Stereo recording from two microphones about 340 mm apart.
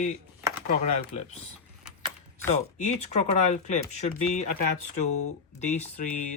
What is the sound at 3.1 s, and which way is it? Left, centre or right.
Speech, centre.